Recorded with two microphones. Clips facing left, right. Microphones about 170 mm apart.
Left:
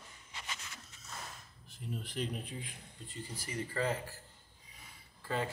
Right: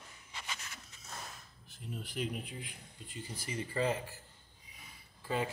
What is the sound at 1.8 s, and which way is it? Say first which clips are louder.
Speech: even; 5° right (ahead or behind).